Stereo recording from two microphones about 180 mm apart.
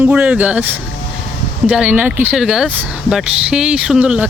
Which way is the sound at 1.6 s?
5° right (ahead or behind).